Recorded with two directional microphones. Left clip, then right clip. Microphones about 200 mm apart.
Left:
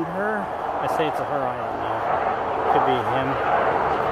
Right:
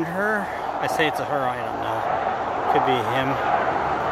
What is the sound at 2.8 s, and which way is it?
Speech, 25° right (ahead or behind).